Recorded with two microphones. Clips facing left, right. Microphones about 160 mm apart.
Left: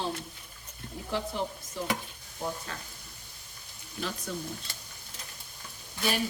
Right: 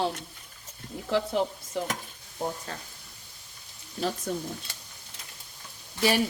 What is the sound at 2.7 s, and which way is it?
Speech, 40° right (ahead or behind).